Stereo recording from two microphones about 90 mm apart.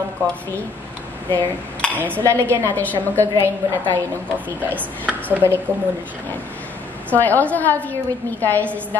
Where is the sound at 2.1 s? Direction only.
30° right (ahead or behind).